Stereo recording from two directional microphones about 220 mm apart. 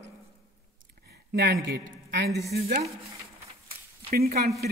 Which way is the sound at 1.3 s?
50° right (ahead or behind).